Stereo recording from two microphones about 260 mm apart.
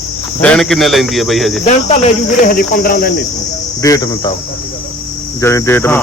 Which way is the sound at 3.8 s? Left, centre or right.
Centre.